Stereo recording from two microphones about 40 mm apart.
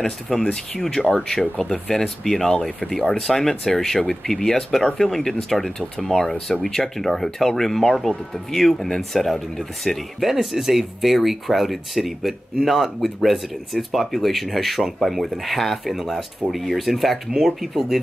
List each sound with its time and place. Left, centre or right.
0.5 s speech: centre